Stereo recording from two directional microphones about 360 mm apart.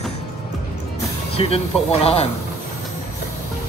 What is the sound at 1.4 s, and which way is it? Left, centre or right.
Speech, centre.